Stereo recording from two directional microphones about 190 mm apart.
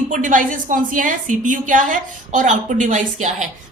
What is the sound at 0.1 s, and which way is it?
A woman's voice, 45° right (ahead or behind).